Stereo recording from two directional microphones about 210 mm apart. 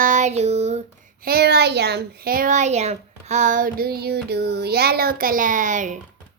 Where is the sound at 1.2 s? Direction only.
50° right (ahead or behind).